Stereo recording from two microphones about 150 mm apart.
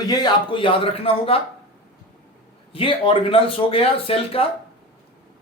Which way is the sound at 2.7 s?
35° left (ahead or behind).